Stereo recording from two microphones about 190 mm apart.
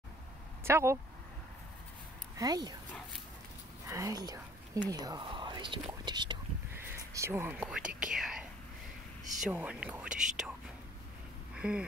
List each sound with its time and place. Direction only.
0.7 s speech: 15° right (ahead or behind)
2.3 s speech: 20° right (ahead or behind)
3.9 s speech: 20° right (ahead or behind)
6.8 s speech: 15° right (ahead or behind)
11.5 s a sound: 5° right (ahead or behind)